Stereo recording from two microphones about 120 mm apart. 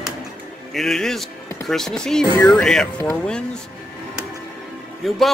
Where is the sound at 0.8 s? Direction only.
5° left (ahead or behind).